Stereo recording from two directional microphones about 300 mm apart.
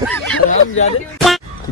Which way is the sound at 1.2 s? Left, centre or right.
Centre.